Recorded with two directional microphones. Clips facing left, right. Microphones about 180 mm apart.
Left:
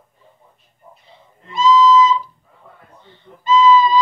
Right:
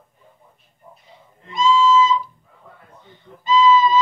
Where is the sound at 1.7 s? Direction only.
10° right (ahead or behind).